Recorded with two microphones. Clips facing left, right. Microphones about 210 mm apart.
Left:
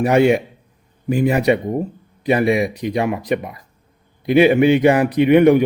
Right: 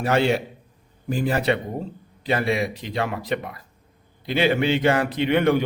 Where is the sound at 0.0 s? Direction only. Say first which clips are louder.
Left 7 dB; 15° left (ahead or behind).